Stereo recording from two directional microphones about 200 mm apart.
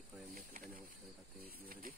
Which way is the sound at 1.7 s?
45° right (ahead or behind).